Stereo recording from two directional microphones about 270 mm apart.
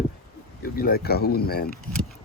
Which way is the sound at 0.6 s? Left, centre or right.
Left.